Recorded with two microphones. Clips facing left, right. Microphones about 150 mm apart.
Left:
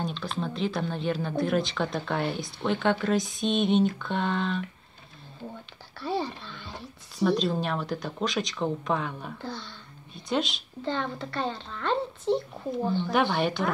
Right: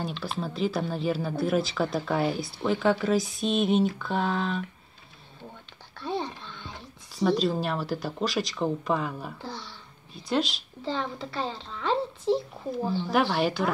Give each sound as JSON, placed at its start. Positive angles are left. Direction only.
{"t": 0.0, "sound": "speech", "side_deg": -5}
{"t": 5.9, "sound": "a sound", "side_deg": 5}
{"t": 7.2, "sound": "speech", "side_deg": 0}